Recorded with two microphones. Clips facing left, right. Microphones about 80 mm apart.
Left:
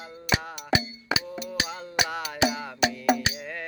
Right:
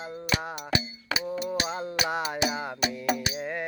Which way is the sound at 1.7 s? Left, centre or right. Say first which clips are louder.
Right 1 dB; right.